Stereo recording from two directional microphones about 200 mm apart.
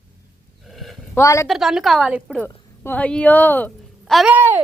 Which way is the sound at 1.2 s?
15° left (ahead or behind).